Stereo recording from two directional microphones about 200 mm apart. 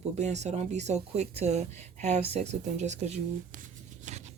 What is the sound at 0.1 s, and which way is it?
Speech, 35° right (ahead or behind).